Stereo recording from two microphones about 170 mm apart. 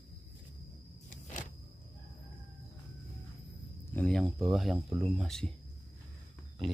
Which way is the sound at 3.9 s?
5° left (ahead or behind).